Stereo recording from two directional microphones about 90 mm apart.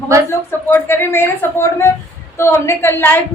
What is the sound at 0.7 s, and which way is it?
A woman's voice, 25° left (ahead or behind).